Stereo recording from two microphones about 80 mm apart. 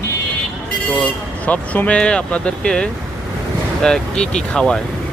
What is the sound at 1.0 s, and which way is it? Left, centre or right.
Speech, centre.